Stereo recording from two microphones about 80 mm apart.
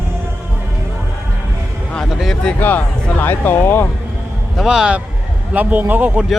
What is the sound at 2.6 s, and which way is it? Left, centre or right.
Speech, left.